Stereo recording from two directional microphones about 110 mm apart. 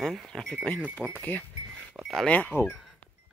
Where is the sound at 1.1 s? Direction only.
15° left (ahead or behind).